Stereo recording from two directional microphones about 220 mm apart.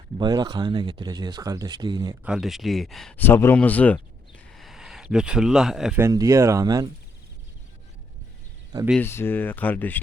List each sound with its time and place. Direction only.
0.2 s speech: 20° right (ahead or behind)
2.2 s speech: centre (ahead or behind)
6.1 s speech: 15° right (ahead or behind)
8.9 s speech: 10° left (ahead or behind)